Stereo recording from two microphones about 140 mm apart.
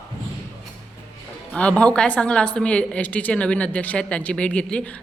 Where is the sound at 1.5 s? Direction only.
10° left (ahead or behind).